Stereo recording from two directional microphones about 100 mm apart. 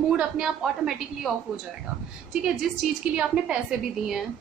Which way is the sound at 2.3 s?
5° right (ahead or behind).